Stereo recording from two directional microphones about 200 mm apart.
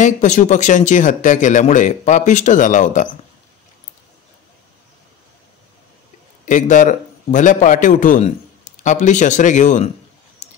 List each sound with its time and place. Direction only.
0.0 s speech: 40° left (ahead or behind)
6.4 s a man's voice: 40° left (ahead or behind)